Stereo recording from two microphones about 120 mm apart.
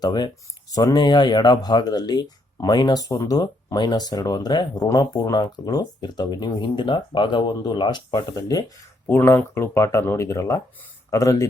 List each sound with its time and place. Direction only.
0.0 s speech: 35° left (ahead or behind)
9.0 s speech: 20° left (ahead or behind)